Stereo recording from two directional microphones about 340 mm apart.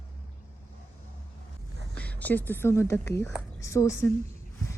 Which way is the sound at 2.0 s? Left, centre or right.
Centre.